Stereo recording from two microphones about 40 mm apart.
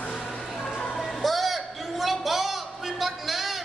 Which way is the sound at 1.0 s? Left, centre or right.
Centre.